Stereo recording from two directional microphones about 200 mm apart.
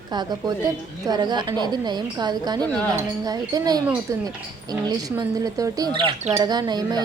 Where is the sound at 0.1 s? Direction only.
20° right (ahead or behind).